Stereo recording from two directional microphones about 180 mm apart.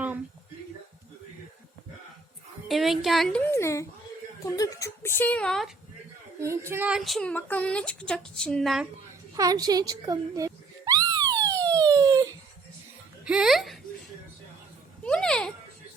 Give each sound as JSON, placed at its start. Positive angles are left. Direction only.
{"t": 2.6, "sound": "a woman's voice", "side_deg": 0}
{"t": 6.4, "sound": "a woman's voice", "side_deg": -15}
{"t": 9.3, "sound": "screaming", "side_deg": -20}
{"t": 13.2, "sound": "music", "side_deg": -5}
{"t": 15.0, "sound": "a sound", "side_deg": 5}